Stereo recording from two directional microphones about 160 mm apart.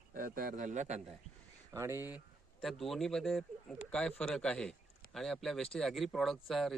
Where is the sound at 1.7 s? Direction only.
15° right (ahead or behind).